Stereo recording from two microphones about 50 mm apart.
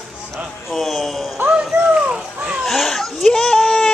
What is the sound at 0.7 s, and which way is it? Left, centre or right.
Speech, centre.